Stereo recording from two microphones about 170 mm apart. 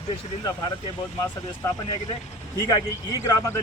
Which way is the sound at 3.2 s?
15° left (ahead or behind).